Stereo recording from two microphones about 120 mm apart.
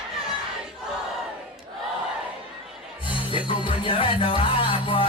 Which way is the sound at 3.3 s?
45° left (ahead or behind).